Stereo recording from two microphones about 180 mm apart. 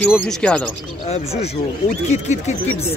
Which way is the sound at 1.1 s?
35° left (ahead or behind).